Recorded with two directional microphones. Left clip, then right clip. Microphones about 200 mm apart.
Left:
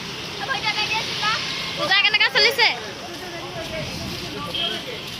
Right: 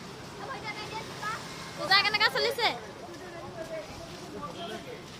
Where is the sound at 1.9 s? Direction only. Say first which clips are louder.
Left 7 dB; 10° right (ahead or behind).